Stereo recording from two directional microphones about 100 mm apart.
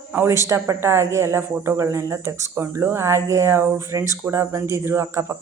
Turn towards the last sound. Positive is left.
turn(degrees=-30)  # may be behind; listen again after turning